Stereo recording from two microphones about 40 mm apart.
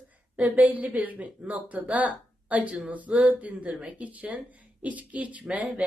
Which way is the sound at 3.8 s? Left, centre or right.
Right.